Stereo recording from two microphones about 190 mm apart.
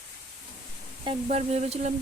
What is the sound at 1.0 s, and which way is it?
Speech, 35° right (ahead or behind).